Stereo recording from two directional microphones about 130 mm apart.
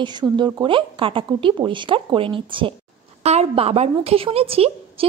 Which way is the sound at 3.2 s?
55° right (ahead or behind).